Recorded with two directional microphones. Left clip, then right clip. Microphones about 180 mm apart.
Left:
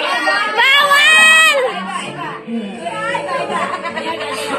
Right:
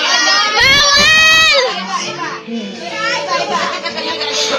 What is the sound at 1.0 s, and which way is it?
Crowd, 10° left (ahead or behind).